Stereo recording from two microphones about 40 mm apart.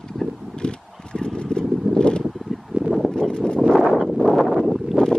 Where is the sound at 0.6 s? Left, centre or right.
Left.